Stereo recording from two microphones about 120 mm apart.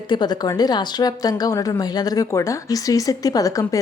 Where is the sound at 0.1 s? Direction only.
35° left (ahead or behind).